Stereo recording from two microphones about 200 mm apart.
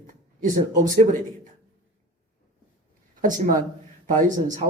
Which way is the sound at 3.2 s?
40° right (ahead or behind).